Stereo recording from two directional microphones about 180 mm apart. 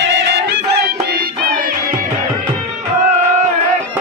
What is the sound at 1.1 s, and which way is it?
Music, 55° right (ahead or behind).